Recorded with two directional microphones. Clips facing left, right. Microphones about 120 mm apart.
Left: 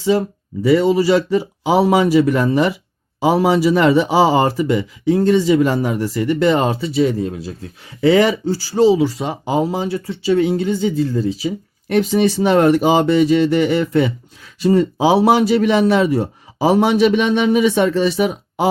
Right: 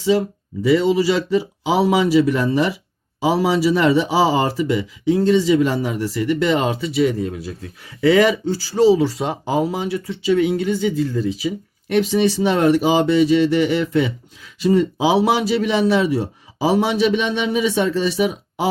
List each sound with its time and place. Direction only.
0.6 s speech: 45° left (ahead or behind); by 9.0 s 30° left (ahead or behind)
9.0 s speech: centre (ahead or behind)
9.5 s speech: 25° left (ahead or behind)
11.9 s speech: 45° left (ahead or behind)